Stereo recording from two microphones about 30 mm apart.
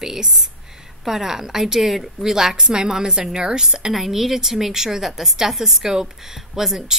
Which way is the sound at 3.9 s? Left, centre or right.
Centre.